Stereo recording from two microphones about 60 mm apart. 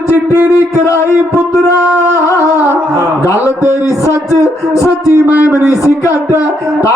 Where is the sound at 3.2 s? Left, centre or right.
Left.